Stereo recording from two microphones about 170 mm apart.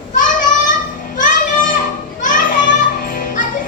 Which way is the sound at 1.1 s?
50° left (ahead or behind).